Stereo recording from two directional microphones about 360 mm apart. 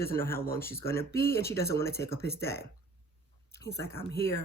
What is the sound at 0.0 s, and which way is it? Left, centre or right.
Speech, centre.